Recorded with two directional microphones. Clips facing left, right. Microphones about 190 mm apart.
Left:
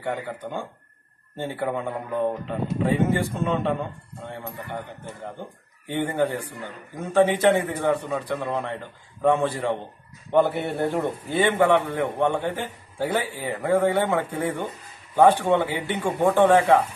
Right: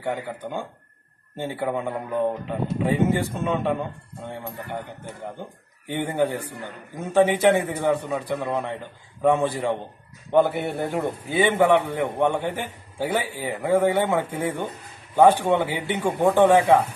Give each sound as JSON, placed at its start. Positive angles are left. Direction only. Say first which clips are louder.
{"t": 0.1, "sound": "a man's voice", "louder": "right 1 dB", "side_deg": -10}
{"t": 5.9, "sound": "a man's voice", "louder": "even", "side_deg": -15}